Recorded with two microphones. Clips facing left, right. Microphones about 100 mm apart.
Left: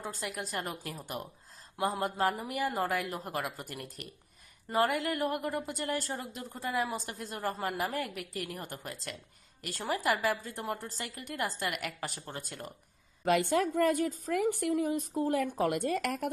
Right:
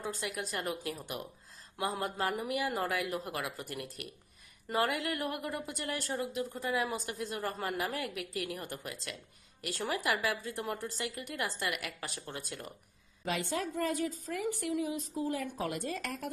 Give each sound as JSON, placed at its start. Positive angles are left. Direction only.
{"t": 0.1, "sound": "a woman's voice", "side_deg": 40}
{"t": 7.6, "sound": "a woman's voice", "side_deg": 20}
{"t": 7.9, "sound": "a woman's voice", "side_deg": 40}
{"t": 13.2, "sound": "a woman's voice", "side_deg": 55}